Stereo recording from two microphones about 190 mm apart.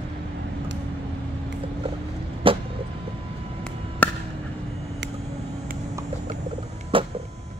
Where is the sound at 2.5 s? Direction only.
30° right (ahead or behind).